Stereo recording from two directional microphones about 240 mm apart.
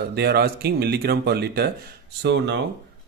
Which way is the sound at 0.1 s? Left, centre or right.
Right.